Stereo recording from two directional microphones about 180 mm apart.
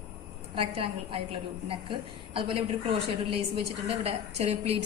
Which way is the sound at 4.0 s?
35° right (ahead or behind).